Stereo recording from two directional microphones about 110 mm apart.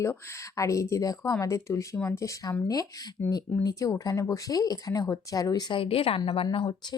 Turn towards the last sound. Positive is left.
turn(degrees=55)  # may be behind; listen again after turning